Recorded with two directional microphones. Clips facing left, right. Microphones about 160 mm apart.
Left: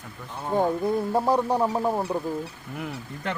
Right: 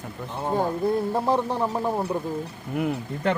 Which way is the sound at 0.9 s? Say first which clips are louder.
Even; 10° left (ahead or behind).